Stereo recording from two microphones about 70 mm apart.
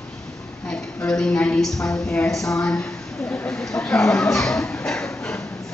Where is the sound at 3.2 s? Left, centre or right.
Left.